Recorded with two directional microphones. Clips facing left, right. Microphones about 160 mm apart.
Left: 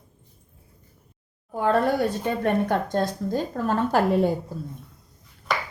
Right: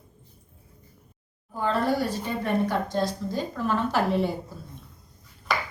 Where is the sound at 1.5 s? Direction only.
55° left (ahead or behind).